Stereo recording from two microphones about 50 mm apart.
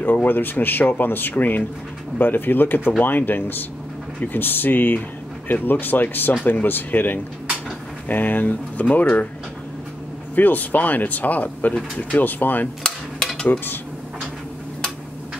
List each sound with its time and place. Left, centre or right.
0.0 s speech: left
10.3 s speech: left
12.8 s stir: centre